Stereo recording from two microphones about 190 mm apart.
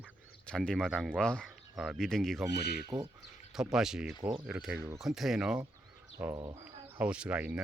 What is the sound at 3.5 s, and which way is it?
Speech, centre (ahead or behind).